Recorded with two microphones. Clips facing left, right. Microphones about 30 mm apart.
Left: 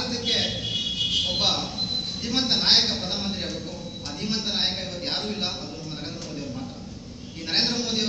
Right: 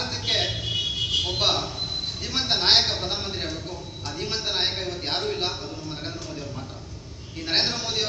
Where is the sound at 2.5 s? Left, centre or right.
Right.